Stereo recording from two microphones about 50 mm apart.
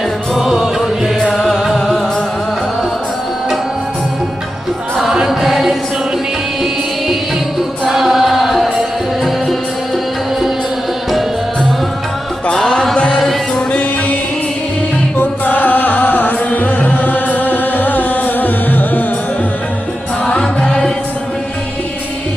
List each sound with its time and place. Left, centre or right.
0.3 s music: centre
1.2 s music: centre
5.2 s music: centre
7.9 s music: centre
15.2 s music: left
20.3 s music: centre